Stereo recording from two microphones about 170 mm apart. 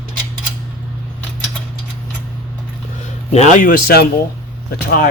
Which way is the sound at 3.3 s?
45° left (ahead or behind).